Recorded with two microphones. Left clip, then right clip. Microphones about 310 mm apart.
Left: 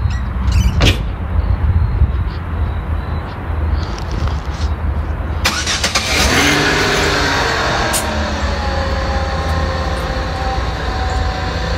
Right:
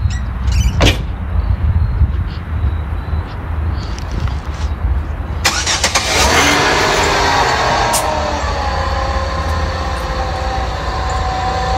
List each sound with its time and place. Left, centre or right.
0.6 s vehicle: centre
5.4 s vehicle: right
9.6 s train: centre